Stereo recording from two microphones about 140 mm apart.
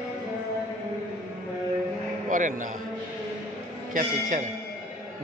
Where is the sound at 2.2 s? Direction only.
65° right (ahead or behind).